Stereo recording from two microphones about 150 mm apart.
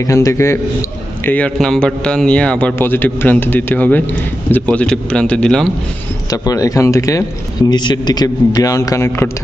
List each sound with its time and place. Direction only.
0.0 s a man's voice: 20° left (ahead or behind)
1.2 s a man's voice: 10° left (ahead or behind)
6.3 s a man's voice: 25° left (ahead or behind)